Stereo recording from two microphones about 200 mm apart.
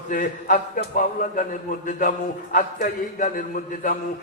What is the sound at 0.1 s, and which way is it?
A man's voice, 40° left (ahead or behind).